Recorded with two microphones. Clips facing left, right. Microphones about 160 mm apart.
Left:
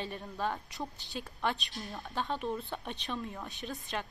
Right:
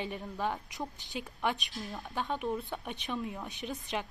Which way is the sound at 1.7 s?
Centre (ahead or behind).